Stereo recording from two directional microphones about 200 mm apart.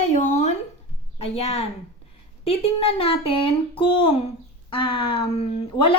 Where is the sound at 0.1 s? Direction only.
35° left (ahead or behind).